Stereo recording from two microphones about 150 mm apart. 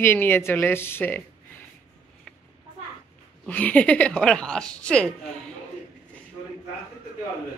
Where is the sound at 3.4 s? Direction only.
10° left (ahead or behind).